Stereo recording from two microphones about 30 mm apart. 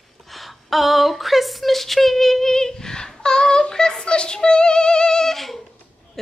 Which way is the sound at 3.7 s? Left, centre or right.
Left.